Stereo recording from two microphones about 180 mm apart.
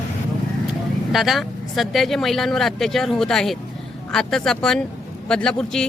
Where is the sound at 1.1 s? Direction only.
Centre (ahead or behind).